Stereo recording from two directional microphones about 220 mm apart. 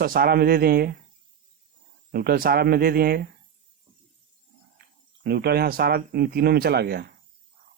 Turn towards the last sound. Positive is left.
turn(degrees=-45)  # may be behind; listen again after turning